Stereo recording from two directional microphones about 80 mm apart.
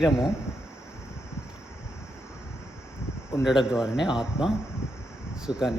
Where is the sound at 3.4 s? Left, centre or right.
Centre.